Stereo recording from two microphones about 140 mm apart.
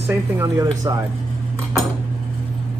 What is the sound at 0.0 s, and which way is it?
Speech, 20° right (ahead or behind).